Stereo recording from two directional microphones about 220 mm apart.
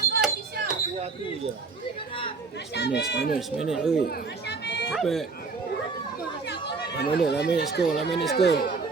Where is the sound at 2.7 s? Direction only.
50° left (ahead or behind).